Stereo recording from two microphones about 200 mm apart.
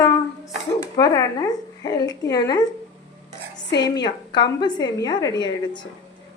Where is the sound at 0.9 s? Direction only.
15° left (ahead or behind).